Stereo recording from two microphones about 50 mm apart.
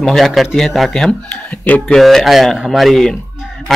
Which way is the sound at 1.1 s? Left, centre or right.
Left.